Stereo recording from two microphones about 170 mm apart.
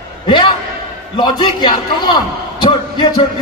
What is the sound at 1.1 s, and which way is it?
A man's voice, 25° left (ahead or behind).